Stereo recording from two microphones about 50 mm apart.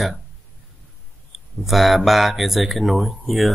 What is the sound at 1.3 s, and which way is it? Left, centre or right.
Speech, centre.